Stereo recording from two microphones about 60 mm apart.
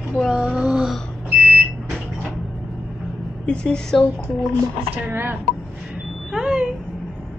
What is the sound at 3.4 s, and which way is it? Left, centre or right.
Speech, centre.